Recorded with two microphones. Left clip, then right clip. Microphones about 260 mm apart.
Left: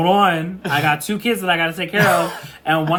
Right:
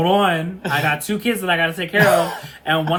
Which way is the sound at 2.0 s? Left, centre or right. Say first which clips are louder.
Right 1 dB; centre.